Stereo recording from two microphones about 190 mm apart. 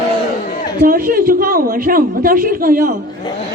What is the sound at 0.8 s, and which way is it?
Speech, 50° right (ahead or behind).